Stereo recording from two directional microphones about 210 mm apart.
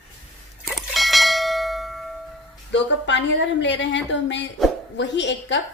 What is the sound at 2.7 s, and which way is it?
A woman's voice, 60° left (ahead or behind).